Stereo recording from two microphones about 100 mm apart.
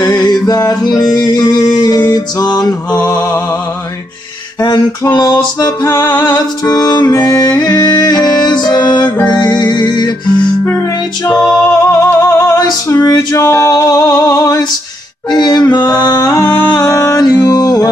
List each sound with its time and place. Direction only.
0.0 s music: 45° left (ahead or behind)
4.6 s a sound: 45° left (ahead or behind)
5.1 s music: 45° left (ahead or behind)
5.9 s music: 20° left (ahead or behind)
6.1 s music: 45° left (ahead or behind)
11.2 s music: 5° left (ahead or behind)
11.7 s music: 35° left (ahead or behind)
15.2 s music: 45° left (ahead or behind)